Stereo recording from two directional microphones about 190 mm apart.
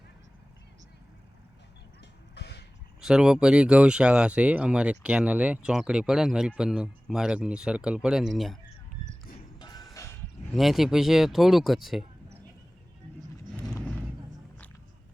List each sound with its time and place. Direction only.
2.3 s music: 60° left (ahead or behind)
3.0 s speech: 5° right (ahead or behind)
9.6 s music: 20° left (ahead or behind)
10.5 s speech: centre (ahead or behind)